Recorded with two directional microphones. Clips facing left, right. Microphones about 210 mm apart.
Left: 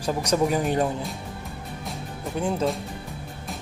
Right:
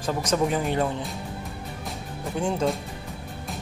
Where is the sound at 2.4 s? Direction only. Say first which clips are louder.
Even; 5° left (ahead or behind).